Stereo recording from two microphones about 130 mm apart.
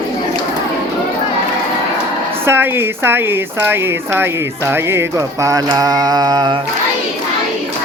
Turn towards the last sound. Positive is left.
turn(degrees=-35)  # may be behind; listen again after turning